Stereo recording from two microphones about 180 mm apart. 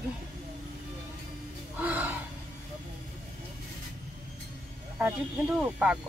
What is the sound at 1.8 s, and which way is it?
Speech, 10° right (ahead or behind).